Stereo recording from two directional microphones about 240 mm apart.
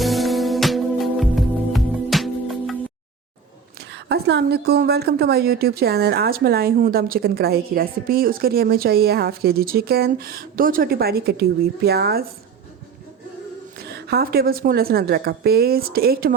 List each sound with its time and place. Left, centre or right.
0.0 s music: centre
3.8 s a woman's voice: right
13.7 s a woman's voice: right